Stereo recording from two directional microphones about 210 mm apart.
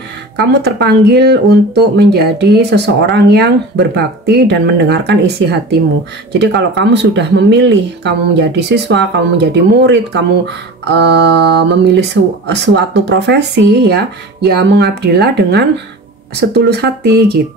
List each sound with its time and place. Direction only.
0.4 s speech: 50° right (ahead or behind)